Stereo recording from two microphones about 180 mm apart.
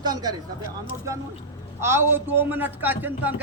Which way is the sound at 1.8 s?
15° right (ahead or behind).